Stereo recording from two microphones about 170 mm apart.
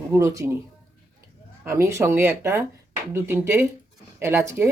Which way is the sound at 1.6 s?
15° right (ahead or behind).